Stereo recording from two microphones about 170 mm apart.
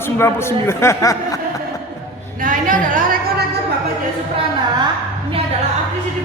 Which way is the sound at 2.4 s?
50° right (ahead or behind).